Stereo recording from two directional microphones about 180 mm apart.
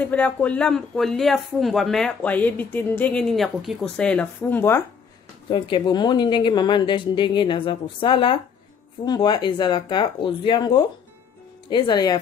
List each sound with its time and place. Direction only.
0.0 s speech: 10° left (ahead or behind)
5.5 s a woman's voice: 25° left (ahead or behind)